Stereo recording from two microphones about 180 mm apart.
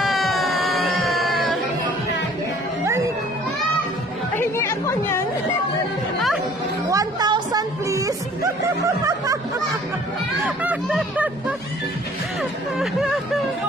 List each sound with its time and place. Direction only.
0.0 s music: centre (ahead or behind)
4.4 s chatter: 15° left (ahead or behind)
6.9 s music: 20° right (ahead or behind)
8.8 s snicker: 20° right (ahead or behind)
10.4 s a sound: 10° right (ahead or behind)
10.9 s vehicle: 5° right (ahead or behind)
12.7 s a sound: centre (ahead or behind)